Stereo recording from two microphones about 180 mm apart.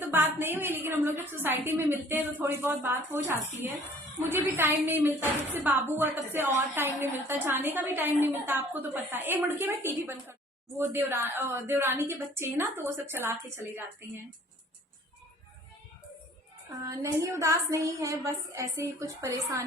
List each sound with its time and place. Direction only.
0.0 s a woman's voice: 10° right (ahead or behind)
16.8 s a woman's voice: 15° right (ahead or behind)